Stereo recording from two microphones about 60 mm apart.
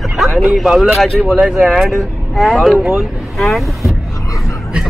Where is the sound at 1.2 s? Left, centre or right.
Centre.